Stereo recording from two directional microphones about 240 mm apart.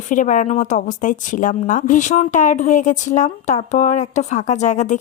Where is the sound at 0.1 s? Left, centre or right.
Left.